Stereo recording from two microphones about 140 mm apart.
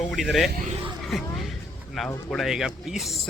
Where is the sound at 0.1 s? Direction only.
Centre (ahead or behind).